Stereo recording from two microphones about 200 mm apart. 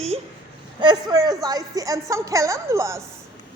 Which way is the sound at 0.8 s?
20° right (ahead or behind).